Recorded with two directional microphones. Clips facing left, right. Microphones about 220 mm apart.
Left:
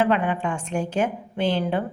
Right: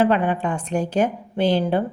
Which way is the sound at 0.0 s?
40° right (ahead or behind).